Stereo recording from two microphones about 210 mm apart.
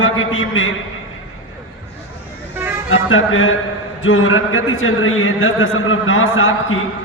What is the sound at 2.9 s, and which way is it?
A man's voice, 70° left (ahead or behind).